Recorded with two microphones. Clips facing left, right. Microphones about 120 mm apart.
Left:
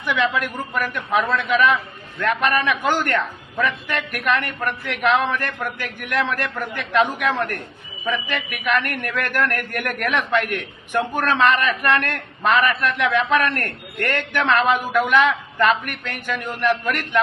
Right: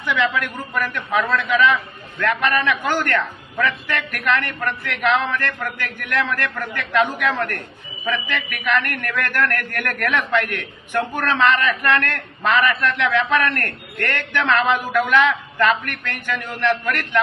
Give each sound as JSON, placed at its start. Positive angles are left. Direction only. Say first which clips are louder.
{"t": 0.0, "sound": "a man's voice", "louder": "even", "side_deg": 15}